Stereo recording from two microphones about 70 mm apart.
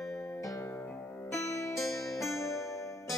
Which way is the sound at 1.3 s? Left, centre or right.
Left.